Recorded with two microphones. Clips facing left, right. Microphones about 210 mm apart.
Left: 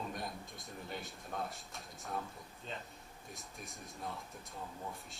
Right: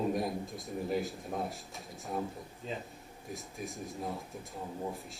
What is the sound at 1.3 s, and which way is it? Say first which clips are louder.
Speech: right 5 dB; 25° right (ahead or behind).